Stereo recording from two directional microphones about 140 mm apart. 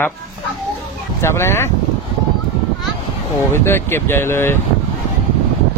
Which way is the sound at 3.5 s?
15° left (ahead or behind).